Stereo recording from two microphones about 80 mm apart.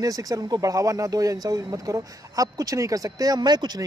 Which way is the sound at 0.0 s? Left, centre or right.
Right.